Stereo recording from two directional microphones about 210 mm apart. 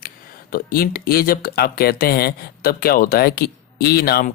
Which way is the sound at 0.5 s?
45° left (ahead or behind).